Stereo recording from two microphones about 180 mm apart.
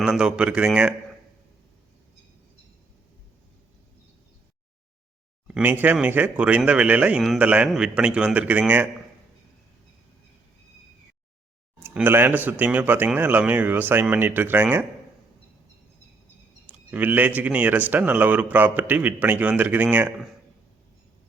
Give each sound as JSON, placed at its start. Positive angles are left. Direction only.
{"t": 0.0, "sound": "speech", "side_deg": -5}
{"t": 5.5, "sound": "speech", "side_deg": -5}
{"t": 11.8, "sound": "speech", "side_deg": -10}
{"t": 16.6, "sound": "speech", "side_deg": -10}